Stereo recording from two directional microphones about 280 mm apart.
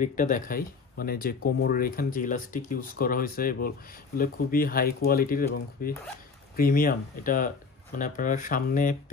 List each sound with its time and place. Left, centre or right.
0.0 s speech: left